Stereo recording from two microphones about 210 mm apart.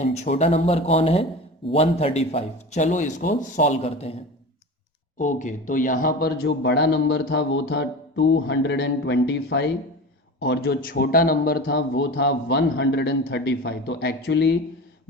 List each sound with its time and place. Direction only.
0.0 s a man's voice: 30° left (ahead or behind); by 14.5 s 50° left (ahead or behind)